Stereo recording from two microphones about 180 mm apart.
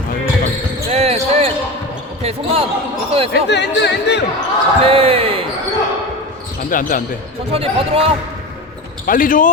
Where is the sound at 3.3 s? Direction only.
70° left (ahead or behind).